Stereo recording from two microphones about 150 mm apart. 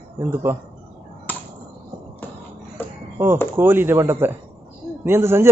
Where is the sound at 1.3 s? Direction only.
10° left (ahead or behind).